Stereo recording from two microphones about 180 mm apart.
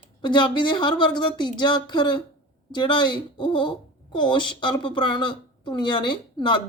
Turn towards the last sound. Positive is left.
turn(degrees=25)  # may be behind; listen again after turning